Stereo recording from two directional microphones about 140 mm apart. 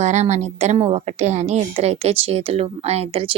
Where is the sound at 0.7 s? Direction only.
40° right (ahead or behind).